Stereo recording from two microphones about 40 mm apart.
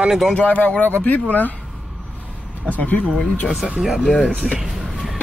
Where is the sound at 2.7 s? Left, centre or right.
Left.